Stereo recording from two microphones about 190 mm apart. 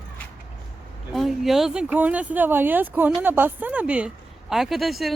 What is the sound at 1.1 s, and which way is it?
Speech, centre (ahead or behind).